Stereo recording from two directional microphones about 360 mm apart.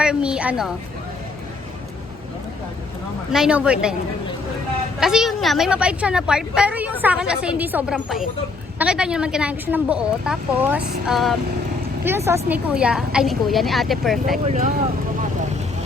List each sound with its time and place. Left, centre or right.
0.0 s a woman's voice: centre
3.3 s a woman's voice: centre
4.9 s a woman's voice: centre
14.4 s speech: centre